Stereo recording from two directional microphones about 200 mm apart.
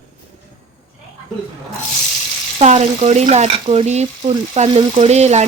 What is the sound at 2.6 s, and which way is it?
Speech, 35° right (ahead or behind).